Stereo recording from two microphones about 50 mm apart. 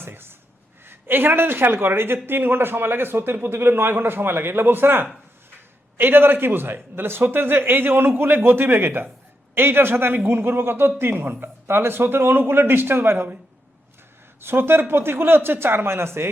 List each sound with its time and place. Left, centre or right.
0.0 s a sound: right
0.9 s speech: right
14.4 s speech: right